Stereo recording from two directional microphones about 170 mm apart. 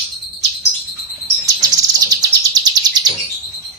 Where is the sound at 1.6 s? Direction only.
20° right (ahead or behind).